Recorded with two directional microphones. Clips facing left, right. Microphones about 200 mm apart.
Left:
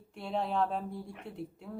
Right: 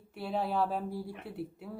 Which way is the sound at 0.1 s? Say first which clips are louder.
Right 1 dB; 5° right (ahead or behind).